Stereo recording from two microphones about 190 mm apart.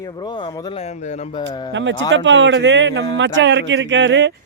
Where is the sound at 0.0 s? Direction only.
25° left (ahead or behind).